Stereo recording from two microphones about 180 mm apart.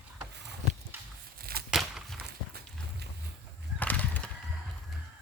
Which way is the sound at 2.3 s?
65° right (ahead or behind).